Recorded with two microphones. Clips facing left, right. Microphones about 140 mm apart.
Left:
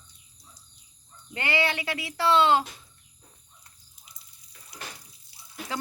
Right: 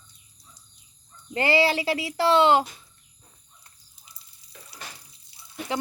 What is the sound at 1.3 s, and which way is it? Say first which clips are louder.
Speech: right 6 dB; 30° right (ahead or behind).